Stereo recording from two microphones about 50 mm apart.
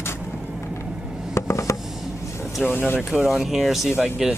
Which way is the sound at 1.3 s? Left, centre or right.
Left.